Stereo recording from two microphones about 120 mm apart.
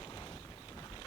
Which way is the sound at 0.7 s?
35° left (ahead or behind).